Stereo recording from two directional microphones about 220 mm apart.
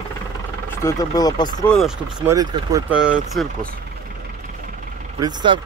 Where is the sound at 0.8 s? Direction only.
15° left (ahead or behind).